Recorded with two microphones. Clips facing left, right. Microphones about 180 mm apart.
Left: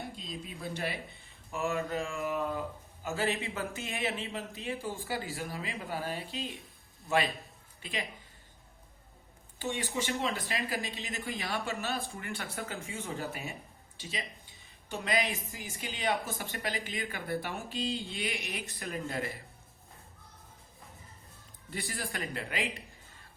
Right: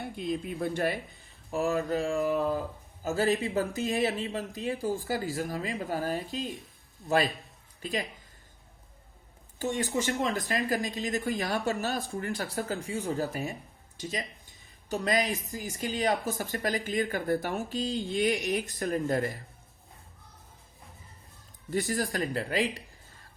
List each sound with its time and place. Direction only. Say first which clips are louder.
0.0 s speech: right 9 dB; 60° right (ahead or behind)
1.5 s speech: right 5 dB; 35° right (ahead or behind)
7.8 s speech: right 6 dB; 40° right (ahead or behind)
9.6 s speech: right 5 dB; 45° right (ahead or behind)
21.7 s speech: right 9 dB; 45° right (ahead or behind)